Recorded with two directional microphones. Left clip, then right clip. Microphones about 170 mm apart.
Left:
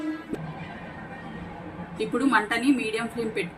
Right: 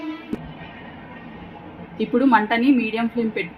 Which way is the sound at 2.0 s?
45° right (ahead or behind).